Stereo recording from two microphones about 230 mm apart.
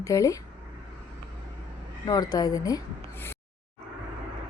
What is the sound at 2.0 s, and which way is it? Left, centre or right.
Speech, centre.